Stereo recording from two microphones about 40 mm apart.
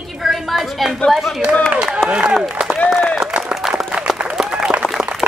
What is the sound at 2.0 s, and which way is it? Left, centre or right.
Speech, right.